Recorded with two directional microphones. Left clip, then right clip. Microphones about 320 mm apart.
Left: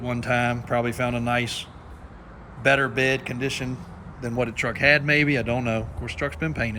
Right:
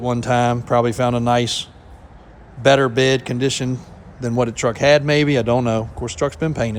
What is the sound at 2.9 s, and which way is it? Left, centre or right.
A man's voice, centre.